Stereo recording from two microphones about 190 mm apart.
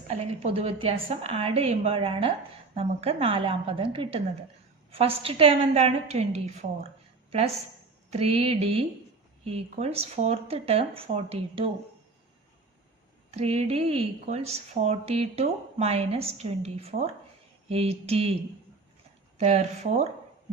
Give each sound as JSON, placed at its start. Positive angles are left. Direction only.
{"t": 0.1, "sound": "a woman's voice", "side_deg": -30}
{"t": 13.3, "sound": "speech", "side_deg": -35}
{"t": 19.4, "sound": "speech", "side_deg": -35}